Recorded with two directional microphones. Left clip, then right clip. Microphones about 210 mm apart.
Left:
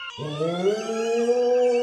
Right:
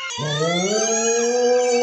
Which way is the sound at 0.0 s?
35° right (ahead or behind).